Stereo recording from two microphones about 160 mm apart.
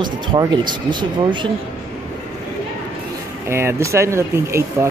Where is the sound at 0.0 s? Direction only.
30° right (ahead or behind).